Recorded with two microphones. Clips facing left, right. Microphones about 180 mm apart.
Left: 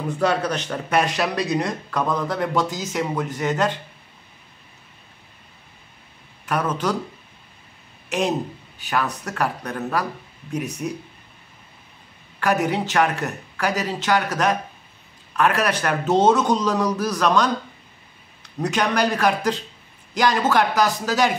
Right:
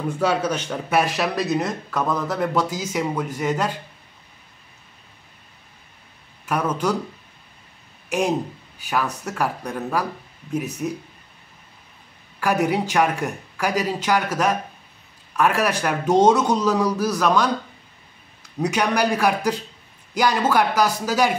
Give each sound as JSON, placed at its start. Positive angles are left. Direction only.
{"t": 0.1, "sound": "a man's voice", "side_deg": -10}
{"t": 6.4, "sound": "a man's voice", "side_deg": -10}
{"t": 8.8, "sound": "a man's voice", "side_deg": -10}
{"t": 12.6, "sound": "a man's voice", "side_deg": -10}
{"t": 18.6, "sound": "a man's voice", "side_deg": -10}